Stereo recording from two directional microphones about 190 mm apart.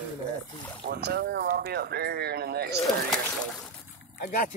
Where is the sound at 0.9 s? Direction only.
60° right (ahead or behind).